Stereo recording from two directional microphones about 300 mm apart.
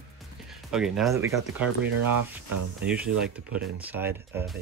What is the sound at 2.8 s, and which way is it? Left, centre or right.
Speech, centre.